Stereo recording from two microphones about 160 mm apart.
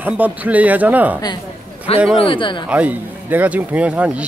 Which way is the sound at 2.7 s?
10° right (ahead or behind).